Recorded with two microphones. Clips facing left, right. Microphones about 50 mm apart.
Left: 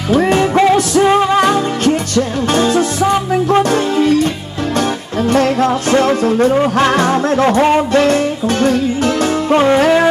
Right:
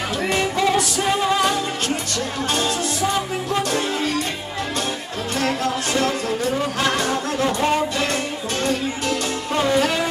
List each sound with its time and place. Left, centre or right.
0.1 s music: left
5.3 s music: left